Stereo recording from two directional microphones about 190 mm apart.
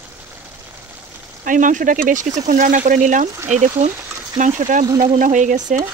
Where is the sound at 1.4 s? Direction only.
45° right (ahead or behind).